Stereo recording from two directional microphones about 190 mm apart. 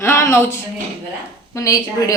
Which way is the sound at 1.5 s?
20° left (ahead or behind).